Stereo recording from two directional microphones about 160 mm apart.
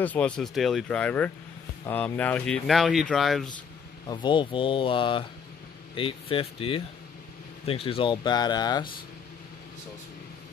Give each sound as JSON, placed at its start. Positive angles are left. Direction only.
{"t": 0.0, "sound": "speech", "side_deg": 10}
{"t": 4.1, "sound": "speech", "side_deg": 30}